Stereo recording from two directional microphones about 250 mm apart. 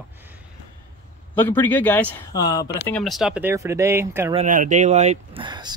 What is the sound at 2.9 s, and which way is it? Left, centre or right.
Speech, centre.